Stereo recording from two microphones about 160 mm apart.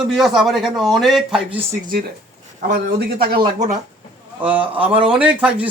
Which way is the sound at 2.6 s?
75° right (ahead or behind).